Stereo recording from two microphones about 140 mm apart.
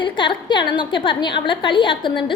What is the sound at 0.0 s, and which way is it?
A woman's voice, 35° left (ahead or behind).